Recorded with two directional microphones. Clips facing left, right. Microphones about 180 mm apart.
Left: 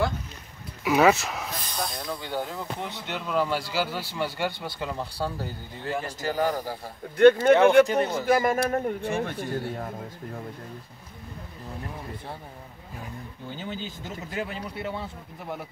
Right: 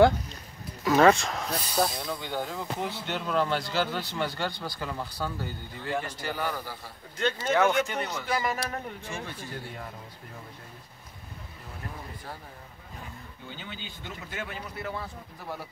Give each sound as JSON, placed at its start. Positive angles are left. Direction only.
{"t": 0.8, "sound": "speech", "side_deg": 10}
{"t": 1.5, "sound": "speech", "side_deg": -10}
{"t": 4.6, "sound": "speech", "side_deg": 20}
{"t": 6.0, "sound": "a man's voice", "side_deg": 40}
{"t": 7.8, "sound": "speech", "side_deg": 35}
{"t": 8.2, "sound": "a man's voice", "side_deg": 50}
{"t": 13.6, "sound": "speech", "side_deg": 45}